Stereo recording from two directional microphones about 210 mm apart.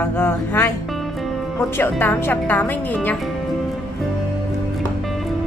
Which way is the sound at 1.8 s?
10° left (ahead or behind).